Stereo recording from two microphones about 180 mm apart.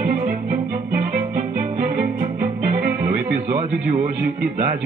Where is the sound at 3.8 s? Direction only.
50° right (ahead or behind).